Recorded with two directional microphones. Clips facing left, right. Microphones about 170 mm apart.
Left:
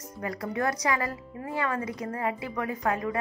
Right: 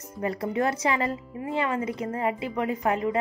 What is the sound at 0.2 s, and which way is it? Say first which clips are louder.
Speech: right 4 dB; 25° right (ahead or behind).